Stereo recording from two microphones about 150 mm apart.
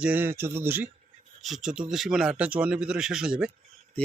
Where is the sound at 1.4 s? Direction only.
Centre (ahead or behind).